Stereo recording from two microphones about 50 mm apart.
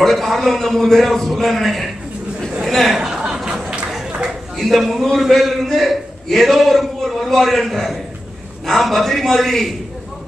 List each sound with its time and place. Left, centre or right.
0.0 s a man's voice: centre
3.0 s a sound: centre
4.6 s a man's voice: centre